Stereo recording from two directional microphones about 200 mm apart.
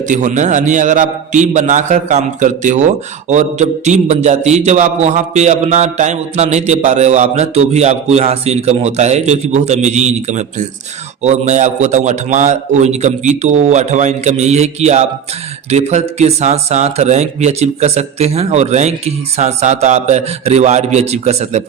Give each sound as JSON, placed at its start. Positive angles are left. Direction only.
{"t": 0.1, "sound": "a man's voice", "side_deg": -40}